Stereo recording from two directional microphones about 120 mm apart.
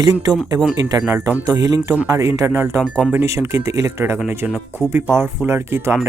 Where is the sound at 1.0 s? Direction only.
15° right (ahead or behind).